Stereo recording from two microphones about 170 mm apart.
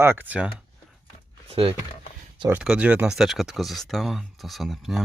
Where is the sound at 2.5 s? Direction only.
5° right (ahead or behind).